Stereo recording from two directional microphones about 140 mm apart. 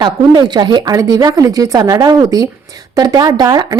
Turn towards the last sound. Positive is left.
turn(degrees=-30)  # may be behind; listen again after turning